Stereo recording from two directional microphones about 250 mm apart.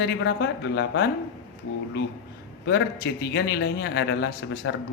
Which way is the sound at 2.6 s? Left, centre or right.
Left.